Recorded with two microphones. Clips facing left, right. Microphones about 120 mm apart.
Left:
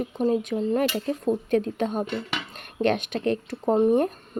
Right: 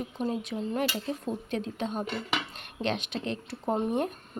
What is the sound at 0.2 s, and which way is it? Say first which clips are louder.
Speech: left 8 dB; 45° left (ahead or behind).